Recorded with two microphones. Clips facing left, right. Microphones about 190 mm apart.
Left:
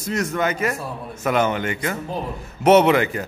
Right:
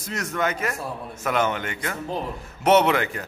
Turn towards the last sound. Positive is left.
turn(degrees=5)  # may be behind; listen again after turning